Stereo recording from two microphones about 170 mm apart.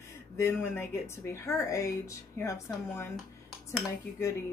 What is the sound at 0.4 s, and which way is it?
Speech, 15° left (ahead or behind).